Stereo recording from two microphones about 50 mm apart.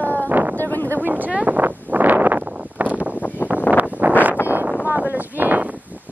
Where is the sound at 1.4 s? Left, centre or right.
Right.